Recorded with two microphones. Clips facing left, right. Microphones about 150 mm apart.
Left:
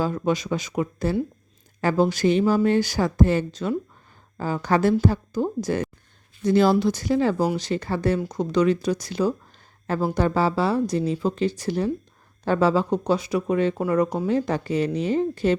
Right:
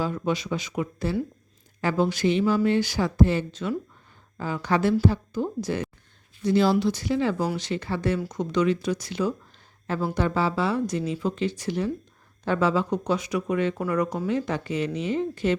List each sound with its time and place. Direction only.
0.0 s a woman's voice: 45° left (ahead or behind)